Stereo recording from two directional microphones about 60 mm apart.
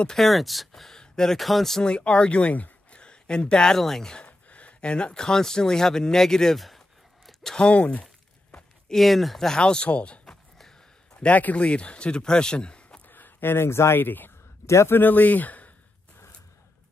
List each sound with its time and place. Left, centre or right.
0.0 s speech: centre
1.9 s speech: centre
4.3 s speech: left; by 6.8 s centre
7.2 s a sound: centre
7.6 s speech: left
8.5 s a sound: centre
9.0 s speech: centre
13.1 s a sound: left
13.9 s speech: left
14.7 s a man's voice: left
15.0 s speech: left